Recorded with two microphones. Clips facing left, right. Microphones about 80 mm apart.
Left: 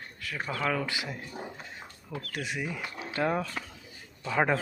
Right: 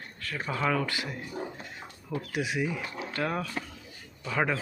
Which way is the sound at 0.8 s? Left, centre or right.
Centre.